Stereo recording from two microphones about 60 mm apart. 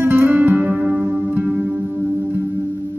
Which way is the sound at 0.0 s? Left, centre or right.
Right.